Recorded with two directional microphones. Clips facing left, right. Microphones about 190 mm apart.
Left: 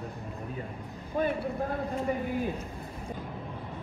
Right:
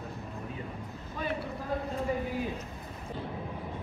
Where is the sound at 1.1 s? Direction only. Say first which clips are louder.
Left 6 dB; 50° left (ahead or behind).